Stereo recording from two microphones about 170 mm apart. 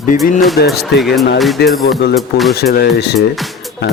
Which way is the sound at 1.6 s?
75° left (ahead or behind).